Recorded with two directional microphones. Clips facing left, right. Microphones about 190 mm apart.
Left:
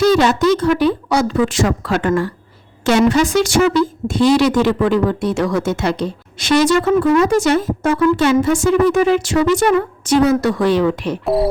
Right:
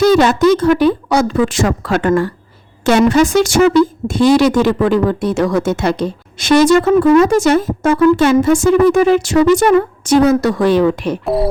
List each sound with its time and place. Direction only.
0.0 s a woman's voice: 50° right (ahead or behind)